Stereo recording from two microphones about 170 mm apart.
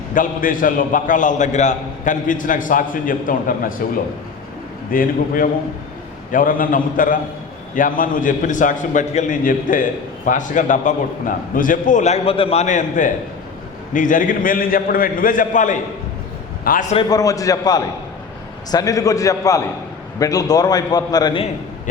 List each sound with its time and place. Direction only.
0.1 s a man's voice: 50° left (ahead or behind)
4.9 s a man's voice: 55° left (ahead or behind)
17.0 s a man's voice: 20° left (ahead or behind)